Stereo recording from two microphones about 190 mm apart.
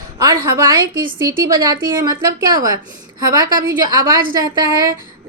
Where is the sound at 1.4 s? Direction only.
20° right (ahead or behind).